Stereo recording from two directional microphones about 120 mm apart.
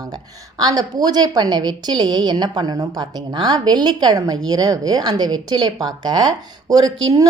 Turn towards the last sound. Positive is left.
turn(degrees=-30)  # may be behind; listen again after turning